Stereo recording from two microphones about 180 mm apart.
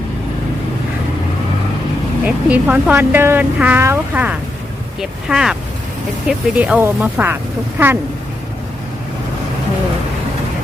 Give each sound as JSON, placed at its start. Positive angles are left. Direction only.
{"t": 2.2, "sound": "a woman's voice", "side_deg": -10}